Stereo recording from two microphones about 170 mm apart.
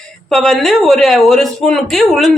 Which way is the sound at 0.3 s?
5° left (ahead or behind).